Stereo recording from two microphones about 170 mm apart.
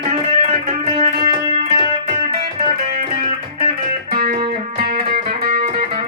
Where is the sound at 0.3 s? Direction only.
35° right (ahead or behind).